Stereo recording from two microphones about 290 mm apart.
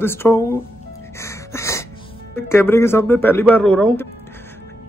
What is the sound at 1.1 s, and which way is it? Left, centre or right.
Music, centre.